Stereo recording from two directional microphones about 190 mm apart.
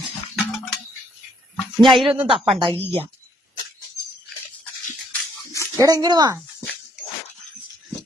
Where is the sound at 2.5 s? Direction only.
25° right (ahead or behind).